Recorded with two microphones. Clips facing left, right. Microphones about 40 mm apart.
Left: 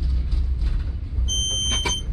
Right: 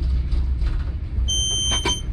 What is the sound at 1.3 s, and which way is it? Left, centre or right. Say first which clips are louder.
Smoke detector: right 2 dB; right.